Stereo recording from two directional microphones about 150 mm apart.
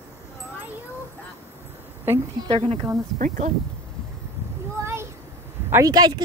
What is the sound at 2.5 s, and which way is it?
Speech, 35° right (ahead or behind).